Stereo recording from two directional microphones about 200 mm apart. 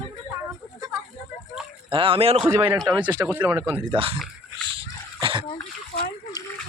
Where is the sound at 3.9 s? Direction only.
25° right (ahead or behind).